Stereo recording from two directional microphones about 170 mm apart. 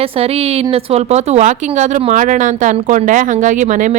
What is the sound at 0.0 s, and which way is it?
Speech, 35° right (ahead or behind).